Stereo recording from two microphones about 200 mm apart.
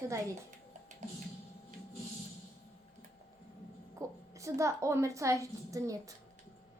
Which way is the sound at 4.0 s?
15° right (ahead or behind).